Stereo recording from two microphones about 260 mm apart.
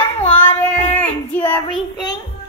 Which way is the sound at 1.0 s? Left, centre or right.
Centre.